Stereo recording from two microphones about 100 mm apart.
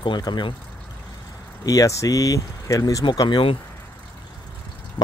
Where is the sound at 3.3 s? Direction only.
60° left (ahead or behind).